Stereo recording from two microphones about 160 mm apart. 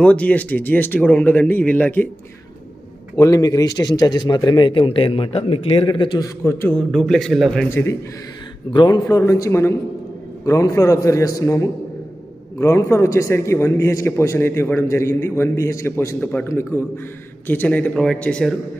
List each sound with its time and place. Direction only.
0.0 s a man's voice: 10° left (ahead or behind)
3.2 s a man's voice: 20° left (ahead or behind)
6.4 s a man's voice: 15° left (ahead or behind)
6.9 s a man's voice: centre (ahead or behind)
7.7 s a man's voice: 15° left (ahead or behind)